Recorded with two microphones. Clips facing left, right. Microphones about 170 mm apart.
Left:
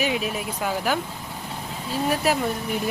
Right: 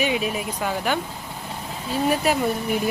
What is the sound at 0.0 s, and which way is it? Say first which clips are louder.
Speech: right 2 dB; centre (ahead or behind).